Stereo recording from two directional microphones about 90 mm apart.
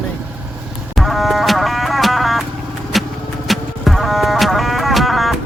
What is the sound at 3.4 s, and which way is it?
Music, centre (ahead or behind).